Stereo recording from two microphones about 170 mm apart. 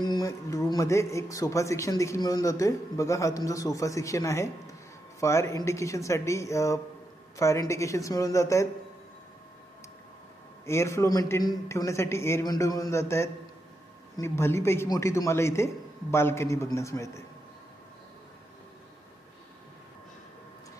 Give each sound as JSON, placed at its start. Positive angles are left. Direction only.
{"t": 0.0, "sound": "a man's voice", "side_deg": 20}
{"t": 10.6, "sound": "a man's voice", "side_deg": 15}